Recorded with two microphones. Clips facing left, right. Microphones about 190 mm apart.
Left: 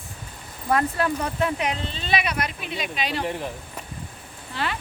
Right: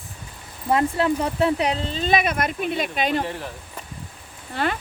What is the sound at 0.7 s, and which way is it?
Speech, 25° right (ahead or behind).